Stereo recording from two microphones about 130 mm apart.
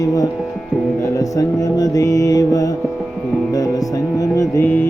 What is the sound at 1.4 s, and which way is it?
Music, 30° left (ahead or behind).